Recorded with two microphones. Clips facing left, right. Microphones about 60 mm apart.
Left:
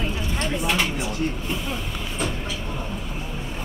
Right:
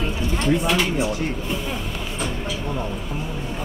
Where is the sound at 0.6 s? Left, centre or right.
Centre.